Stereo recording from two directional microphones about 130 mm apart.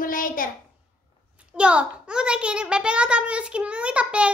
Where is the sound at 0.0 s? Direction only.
90° left.